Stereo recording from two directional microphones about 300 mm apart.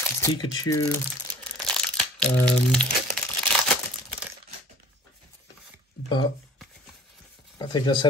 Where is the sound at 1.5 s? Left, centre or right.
Centre.